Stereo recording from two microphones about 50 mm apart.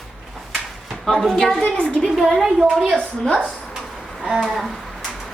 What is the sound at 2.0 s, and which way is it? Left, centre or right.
Speech, centre.